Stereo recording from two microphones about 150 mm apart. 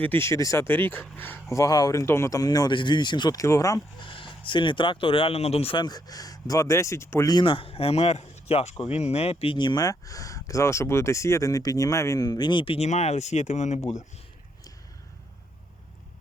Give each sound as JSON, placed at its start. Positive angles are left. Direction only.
{"t": 0.0, "sound": "speech", "side_deg": 15}
{"t": 4.0, "sound": "speech", "side_deg": 35}